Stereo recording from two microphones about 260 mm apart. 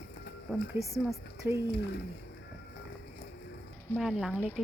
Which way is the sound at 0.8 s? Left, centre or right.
Centre.